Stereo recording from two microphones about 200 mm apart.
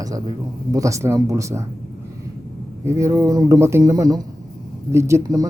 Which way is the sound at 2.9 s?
15° right (ahead or behind).